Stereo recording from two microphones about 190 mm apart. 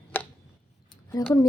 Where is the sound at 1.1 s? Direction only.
15° left (ahead or behind).